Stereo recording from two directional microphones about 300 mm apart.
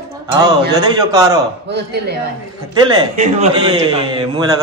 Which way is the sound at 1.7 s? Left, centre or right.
Right.